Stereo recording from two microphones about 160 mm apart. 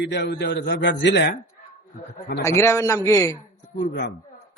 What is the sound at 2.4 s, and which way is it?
Speech, 20° left (ahead or behind).